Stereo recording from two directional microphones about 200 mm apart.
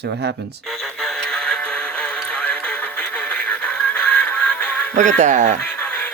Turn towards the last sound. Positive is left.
turn(degrees=5)  # may be behind; listen again after turning